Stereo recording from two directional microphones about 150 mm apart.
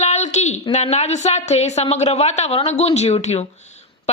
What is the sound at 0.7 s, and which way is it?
A woman's voice, 50° left (ahead or behind).